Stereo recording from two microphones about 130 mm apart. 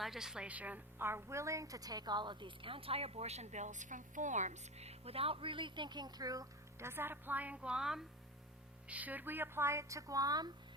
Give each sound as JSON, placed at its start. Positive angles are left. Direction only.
{"t": 0.0, "sound": "a woman's voice", "side_deg": -5}